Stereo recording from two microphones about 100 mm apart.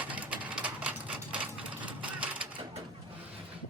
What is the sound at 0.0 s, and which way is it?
Sewing machine, 15° right (ahead or behind).